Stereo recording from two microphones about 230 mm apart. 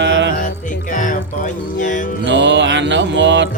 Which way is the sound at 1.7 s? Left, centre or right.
Left.